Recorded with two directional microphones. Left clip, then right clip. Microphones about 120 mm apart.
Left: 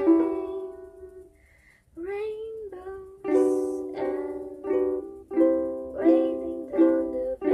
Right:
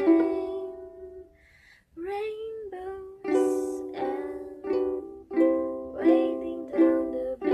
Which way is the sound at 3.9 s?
10° right (ahead or behind).